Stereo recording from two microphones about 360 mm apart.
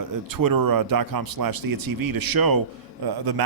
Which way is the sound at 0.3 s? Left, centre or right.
Right.